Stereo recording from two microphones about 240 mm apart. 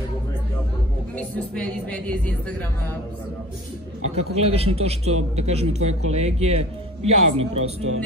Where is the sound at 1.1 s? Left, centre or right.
Centre.